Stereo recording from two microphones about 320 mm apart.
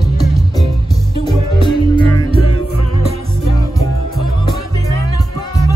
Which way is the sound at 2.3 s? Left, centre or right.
Left.